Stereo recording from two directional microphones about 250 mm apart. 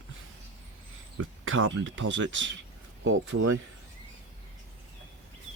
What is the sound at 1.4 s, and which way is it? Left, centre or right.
Speech, right.